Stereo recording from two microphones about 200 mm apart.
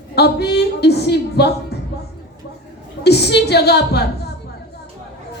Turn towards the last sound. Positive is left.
turn(degrees=55)  # may be behind; listen again after turning